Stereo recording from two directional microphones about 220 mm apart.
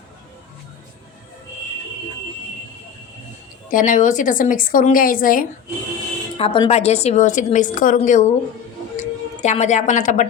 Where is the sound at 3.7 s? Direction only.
35° left (ahead or behind).